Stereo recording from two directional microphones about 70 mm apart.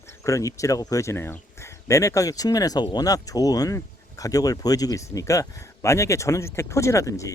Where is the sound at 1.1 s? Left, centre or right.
Left.